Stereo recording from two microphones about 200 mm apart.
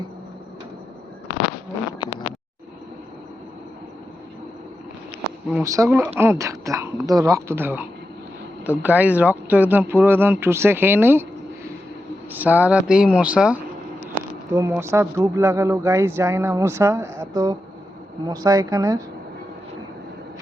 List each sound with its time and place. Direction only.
2.0 s a sound: 25° left (ahead or behind)
5.6 s speech: 15° right (ahead or behind)
12.3 s speech: 10° right (ahead or behind)